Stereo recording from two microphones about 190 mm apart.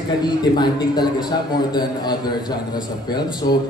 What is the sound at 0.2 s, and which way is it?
A man's voice, 20° left (ahead or behind).